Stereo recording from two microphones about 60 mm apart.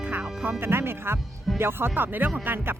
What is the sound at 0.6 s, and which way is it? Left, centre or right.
Speech, right.